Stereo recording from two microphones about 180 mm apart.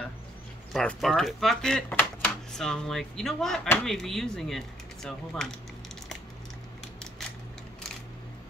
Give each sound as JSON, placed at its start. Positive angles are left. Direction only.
{"t": 0.7, "sound": "speech", "side_deg": 0}